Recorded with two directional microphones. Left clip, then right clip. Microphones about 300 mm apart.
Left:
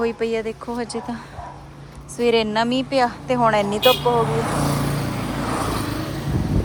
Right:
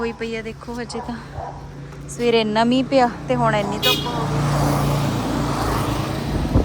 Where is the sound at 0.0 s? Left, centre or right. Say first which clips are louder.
Left 4 dB; centre.